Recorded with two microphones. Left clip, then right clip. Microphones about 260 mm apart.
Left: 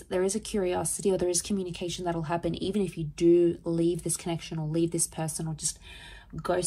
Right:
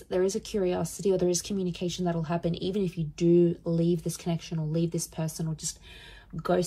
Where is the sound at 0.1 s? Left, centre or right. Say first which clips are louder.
Right 1 dB; left.